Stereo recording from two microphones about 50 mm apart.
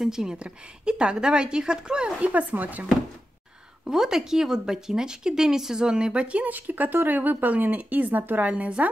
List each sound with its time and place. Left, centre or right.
0.0 s speech: centre; by 2.9 s right
3.8 s speech: centre; by 8.5 s right
8.5 s speech: right